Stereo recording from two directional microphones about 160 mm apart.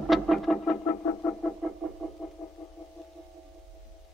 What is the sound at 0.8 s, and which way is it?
Music, 20° left (ahead or behind).